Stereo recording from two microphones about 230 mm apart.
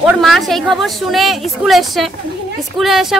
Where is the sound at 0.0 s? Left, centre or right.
Centre.